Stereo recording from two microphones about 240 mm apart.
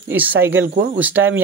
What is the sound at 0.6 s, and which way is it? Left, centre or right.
Speech, right.